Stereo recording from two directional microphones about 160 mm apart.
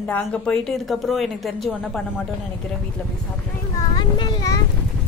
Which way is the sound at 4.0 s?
30° left (ahead or behind).